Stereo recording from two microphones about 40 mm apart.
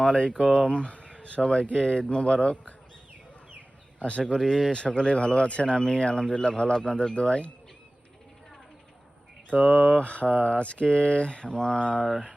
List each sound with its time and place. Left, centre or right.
0.0 s speech: left
4.0 s speech: left
9.5 s speech: left